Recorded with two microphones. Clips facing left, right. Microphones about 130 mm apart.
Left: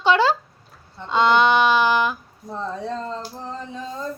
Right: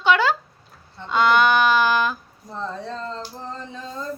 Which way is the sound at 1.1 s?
25° left (ahead or behind).